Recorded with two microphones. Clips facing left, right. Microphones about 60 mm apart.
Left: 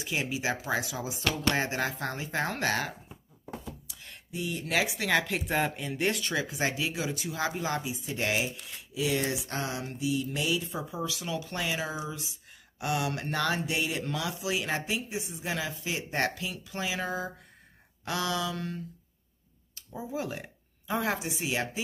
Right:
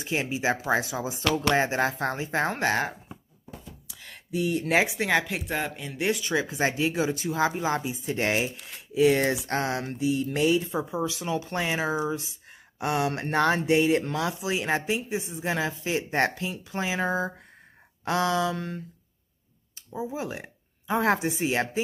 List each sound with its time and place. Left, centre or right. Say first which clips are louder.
0.0 s speech: right 4 dB; right
2.6 s speech: right 4 dB; centre
4.0 s a sound: right 8 dB; right
5.1 s speech: left 1 dB; centre
6.5 s speech: right 5 dB; right
7.8 s a sound: right 5 dB; right
10.7 s speech: right 6 dB; right
19.9 s a sound: right 3 dB; centre
21.0 s speech: right 9 dB; right